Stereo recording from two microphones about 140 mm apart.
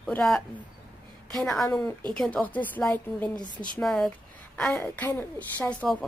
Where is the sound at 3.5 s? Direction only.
35° right (ahead or behind).